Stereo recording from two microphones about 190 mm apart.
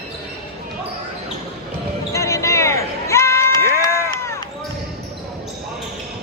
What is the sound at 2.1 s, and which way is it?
Basketball bounce, 15° left (ahead or behind).